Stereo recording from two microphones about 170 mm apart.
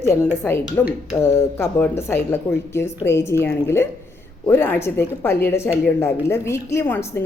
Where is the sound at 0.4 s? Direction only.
10° left (ahead or behind).